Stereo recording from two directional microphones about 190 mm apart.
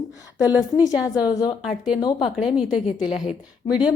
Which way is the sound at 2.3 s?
5° right (ahead or behind).